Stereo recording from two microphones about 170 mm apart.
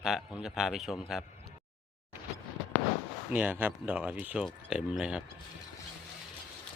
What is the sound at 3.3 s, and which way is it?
A man's voice, 10° right (ahead or behind).